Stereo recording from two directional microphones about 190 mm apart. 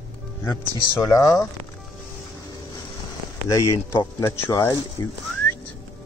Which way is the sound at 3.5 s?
15° left (ahead or behind).